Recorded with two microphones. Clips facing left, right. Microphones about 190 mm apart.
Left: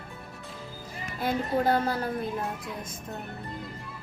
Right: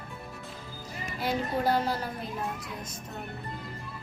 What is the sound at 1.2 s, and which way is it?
Speech, 55° left (ahead or behind).